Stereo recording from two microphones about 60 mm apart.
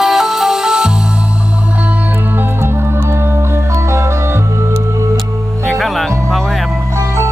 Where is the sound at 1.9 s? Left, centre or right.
Right.